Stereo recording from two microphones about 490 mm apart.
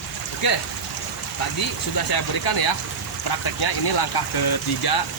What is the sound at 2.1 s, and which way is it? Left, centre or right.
Speech, left.